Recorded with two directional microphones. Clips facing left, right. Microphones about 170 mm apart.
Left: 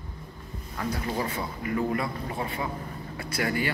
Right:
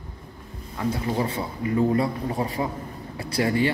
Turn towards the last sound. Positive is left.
turn(degrees=-25)  # may be behind; listen again after turning